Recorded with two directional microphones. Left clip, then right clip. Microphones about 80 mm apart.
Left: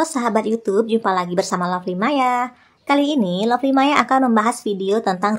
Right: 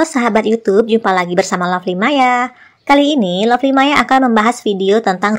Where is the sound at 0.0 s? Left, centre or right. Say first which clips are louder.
Right 6 dB; right.